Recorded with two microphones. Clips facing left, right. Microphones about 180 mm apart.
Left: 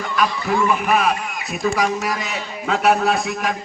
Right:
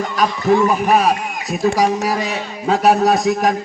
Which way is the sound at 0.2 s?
40° right (ahead or behind).